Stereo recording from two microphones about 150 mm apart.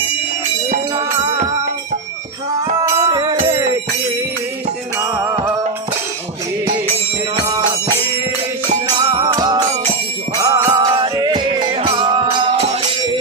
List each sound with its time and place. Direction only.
2.8 s music: 30° right (ahead or behind)
4.9 s music: 20° right (ahead or behind)
7.3 s music: 30° right (ahead or behind)
9.0 s music: 35° right (ahead or behind)